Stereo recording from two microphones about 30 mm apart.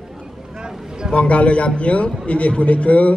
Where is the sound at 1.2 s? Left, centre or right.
Left.